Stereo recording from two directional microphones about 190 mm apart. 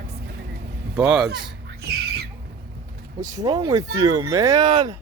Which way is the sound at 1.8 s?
60° right (ahead or behind).